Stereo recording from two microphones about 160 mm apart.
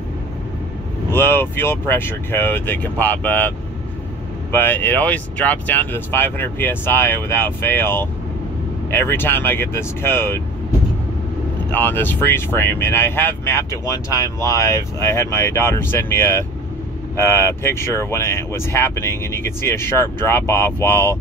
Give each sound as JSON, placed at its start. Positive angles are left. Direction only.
{"t": 1.1, "sound": "speech", "side_deg": 15}
{"t": 11.7, "sound": "speech", "side_deg": 10}